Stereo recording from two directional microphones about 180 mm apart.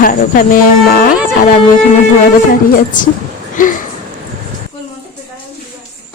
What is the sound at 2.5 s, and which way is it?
Speech, 50° left (ahead or behind).